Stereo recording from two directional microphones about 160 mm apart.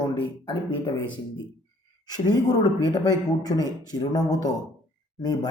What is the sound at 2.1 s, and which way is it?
Speech, 25° left (ahead or behind).